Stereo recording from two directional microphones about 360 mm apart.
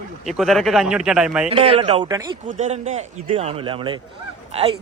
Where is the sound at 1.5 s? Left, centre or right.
Centre.